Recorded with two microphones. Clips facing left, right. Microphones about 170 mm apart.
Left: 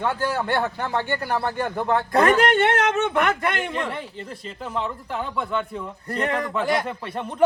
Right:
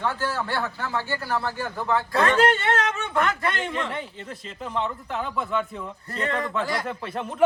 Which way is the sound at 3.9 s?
Centre (ahead or behind).